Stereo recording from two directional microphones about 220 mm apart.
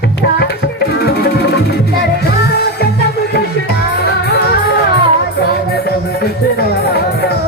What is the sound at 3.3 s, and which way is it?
Music, 50° left (ahead or behind).